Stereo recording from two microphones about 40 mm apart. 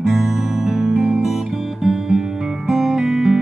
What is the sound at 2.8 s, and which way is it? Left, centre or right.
Music, centre.